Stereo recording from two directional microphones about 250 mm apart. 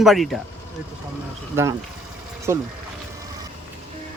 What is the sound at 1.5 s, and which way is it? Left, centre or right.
Speech, centre.